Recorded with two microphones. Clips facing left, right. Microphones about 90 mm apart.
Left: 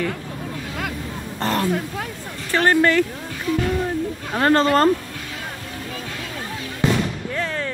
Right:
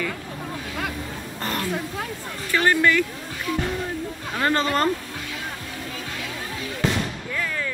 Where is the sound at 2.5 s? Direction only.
40° left (ahead or behind).